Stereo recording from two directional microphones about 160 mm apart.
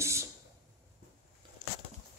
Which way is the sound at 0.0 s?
15° right (ahead or behind).